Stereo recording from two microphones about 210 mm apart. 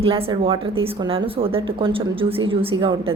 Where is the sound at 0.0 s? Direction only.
25° right (ahead or behind).